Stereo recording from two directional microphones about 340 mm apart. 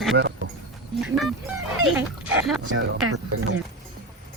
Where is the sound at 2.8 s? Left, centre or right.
Right.